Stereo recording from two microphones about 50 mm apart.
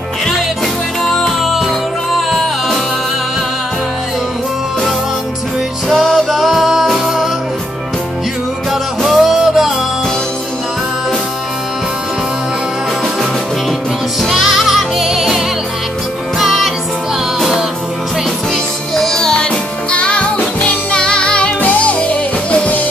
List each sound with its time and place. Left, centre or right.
1.0 s music: centre
1.4 s music: centre
6.0 s music: centre
9.0 s music: centre
14.3 s music: centre
18.9 s music: centre
19.9 s music: left